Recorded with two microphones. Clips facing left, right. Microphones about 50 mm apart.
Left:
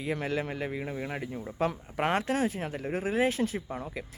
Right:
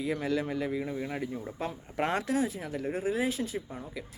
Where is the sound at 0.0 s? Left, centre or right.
Left.